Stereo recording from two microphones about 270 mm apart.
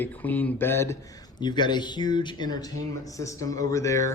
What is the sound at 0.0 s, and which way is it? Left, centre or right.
Speech, centre.